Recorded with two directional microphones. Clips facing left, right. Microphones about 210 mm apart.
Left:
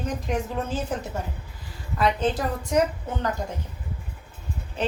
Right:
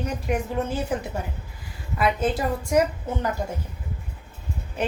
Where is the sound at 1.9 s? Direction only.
10° right (ahead or behind).